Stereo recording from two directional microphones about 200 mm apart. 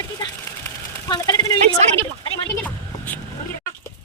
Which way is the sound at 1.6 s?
35° right (ahead or behind).